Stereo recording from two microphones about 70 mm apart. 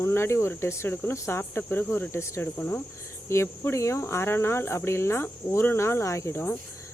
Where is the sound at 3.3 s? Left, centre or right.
Left.